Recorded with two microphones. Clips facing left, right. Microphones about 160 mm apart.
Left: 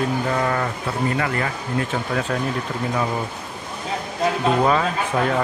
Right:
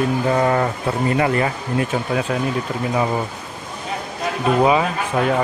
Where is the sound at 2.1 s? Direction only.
10° right (ahead or behind).